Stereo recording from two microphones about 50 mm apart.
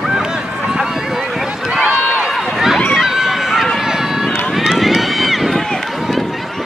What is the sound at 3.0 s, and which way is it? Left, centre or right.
Run, centre.